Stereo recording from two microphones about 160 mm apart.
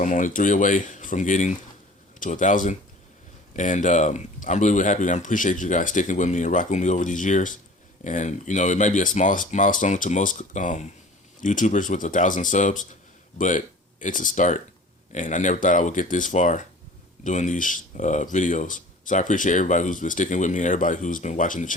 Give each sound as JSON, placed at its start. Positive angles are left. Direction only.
{"t": 0.0, "sound": "speech", "side_deg": 55}
{"t": 14.0, "sound": "speech", "side_deg": 55}